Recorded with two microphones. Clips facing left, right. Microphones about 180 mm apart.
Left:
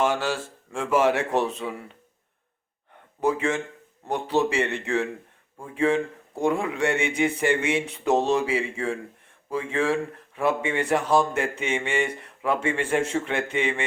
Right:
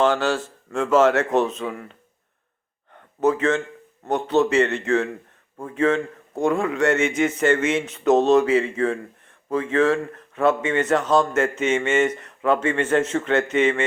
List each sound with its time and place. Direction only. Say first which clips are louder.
0.0 s speech: right 4 dB; 10° left (ahead or behind)
1.3 s speech: right 4 dB; 20° right (ahead or behind)
1.5 s speech: right 3 dB; 15° left (ahead or behind)
3.2 s speech: right 4 dB; 10° left (ahead or behind)
8.2 s speech: right 7 dB; 70° right (ahead or behind)
8.4 s speech: right 6 dB; 15° left (ahead or behind)